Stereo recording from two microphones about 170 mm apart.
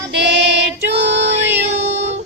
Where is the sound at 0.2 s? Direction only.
85° right.